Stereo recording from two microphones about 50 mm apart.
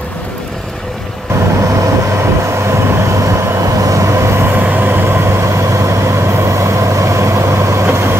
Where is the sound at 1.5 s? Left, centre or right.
Right.